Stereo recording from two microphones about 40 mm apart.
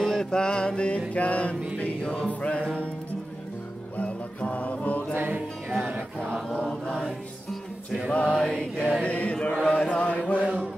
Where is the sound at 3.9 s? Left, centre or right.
Left.